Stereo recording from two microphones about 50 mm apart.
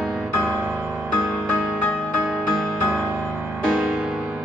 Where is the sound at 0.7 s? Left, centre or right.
Right.